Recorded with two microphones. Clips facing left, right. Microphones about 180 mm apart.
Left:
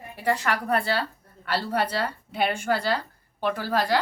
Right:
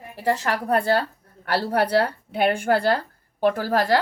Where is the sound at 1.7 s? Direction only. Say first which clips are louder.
Right 8 dB; 60° right (ahead or behind).